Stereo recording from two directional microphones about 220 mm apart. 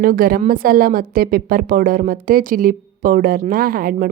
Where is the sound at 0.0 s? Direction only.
40° right (ahead or behind).